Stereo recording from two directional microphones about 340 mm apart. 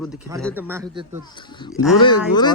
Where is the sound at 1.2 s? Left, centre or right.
Centre.